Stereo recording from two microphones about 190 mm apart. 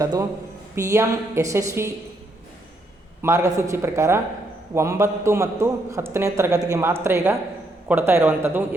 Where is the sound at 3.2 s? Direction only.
15° right (ahead or behind).